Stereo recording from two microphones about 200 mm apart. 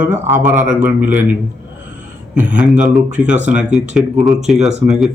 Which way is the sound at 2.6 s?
5° right (ahead or behind).